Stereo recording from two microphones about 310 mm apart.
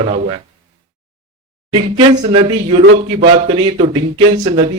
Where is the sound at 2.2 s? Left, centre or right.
Centre.